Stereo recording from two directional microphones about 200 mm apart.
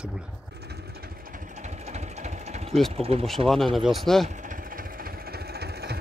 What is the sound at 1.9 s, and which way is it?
Engine, 35° right (ahead or behind).